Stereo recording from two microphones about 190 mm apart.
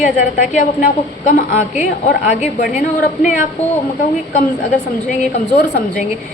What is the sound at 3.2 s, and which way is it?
Speech, 40° left (ahead or behind).